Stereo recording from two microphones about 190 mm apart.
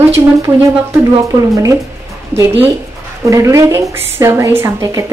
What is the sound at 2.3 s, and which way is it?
A woman's voice, 10° right (ahead or behind).